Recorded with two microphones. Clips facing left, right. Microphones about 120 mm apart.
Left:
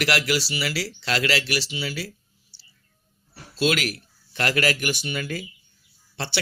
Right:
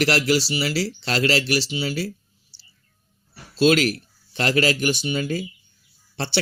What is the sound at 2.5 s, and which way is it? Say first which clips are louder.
Whispering: right 1 dB; 25° right (ahead or behind).